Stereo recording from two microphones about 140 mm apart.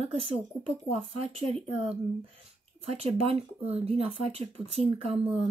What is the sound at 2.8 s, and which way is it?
Speech, 45° right (ahead or behind).